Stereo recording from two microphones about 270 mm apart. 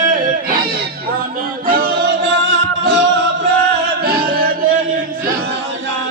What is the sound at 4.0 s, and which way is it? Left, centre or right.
Music, right.